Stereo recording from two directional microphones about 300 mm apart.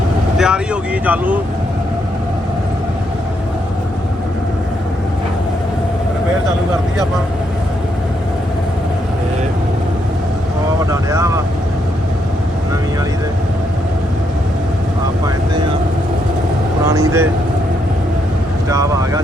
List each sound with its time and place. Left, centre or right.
0.3 s speech: centre
10.9 s vehicle: centre
16.8 s speech: centre
18.7 s speech: centre